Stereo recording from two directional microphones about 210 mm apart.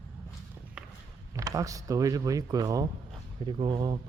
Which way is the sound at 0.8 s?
5° right (ahead or behind).